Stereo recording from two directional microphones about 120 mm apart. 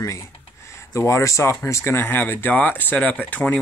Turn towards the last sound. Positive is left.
turn(degrees=10)  # may be behind; listen again after turning